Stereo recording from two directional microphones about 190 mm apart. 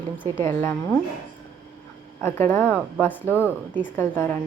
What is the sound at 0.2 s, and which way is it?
Speech, 10° left (ahead or behind).